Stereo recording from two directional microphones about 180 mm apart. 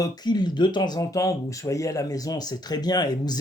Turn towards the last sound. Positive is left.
turn(degrees=20)  # may be behind; listen again after turning